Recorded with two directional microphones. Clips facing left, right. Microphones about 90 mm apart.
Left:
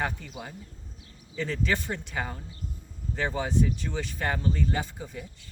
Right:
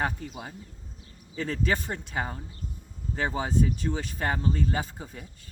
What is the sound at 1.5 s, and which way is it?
Speech, 40° right (ahead or behind).